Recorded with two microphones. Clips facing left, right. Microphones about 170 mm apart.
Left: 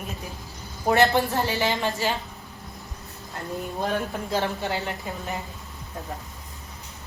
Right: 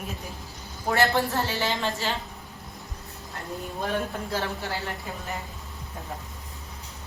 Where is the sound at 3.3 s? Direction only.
20° left (ahead or behind).